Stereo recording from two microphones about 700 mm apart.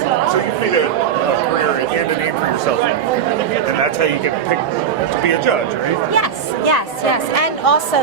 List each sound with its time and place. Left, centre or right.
6.7 s a woman's voice: left